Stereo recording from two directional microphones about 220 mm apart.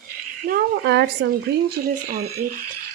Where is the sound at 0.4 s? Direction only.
45° right (ahead or behind).